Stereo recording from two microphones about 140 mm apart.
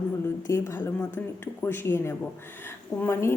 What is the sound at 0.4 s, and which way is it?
A woman's voice, 20° left (ahead or behind).